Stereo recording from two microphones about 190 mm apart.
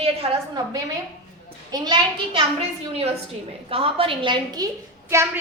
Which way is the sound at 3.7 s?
30° right (ahead or behind).